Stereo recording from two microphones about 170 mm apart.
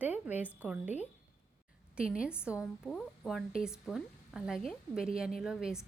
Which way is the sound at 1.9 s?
5° right (ahead or behind).